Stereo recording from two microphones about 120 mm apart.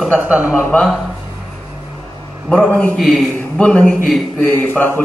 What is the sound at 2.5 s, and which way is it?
A man's voice, 5° left (ahead or behind).